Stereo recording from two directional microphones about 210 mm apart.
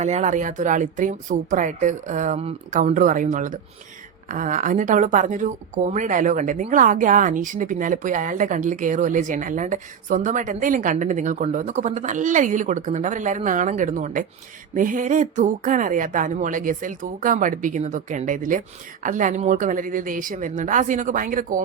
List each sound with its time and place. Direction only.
0.0 s speech: 35° right (ahead or behind)